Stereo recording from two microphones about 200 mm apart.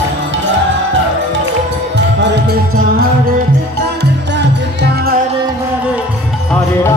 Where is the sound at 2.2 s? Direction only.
55° right (ahead or behind).